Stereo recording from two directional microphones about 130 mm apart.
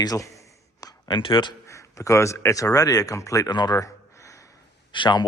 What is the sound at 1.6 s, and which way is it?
A man's voice, 25° left (ahead or behind).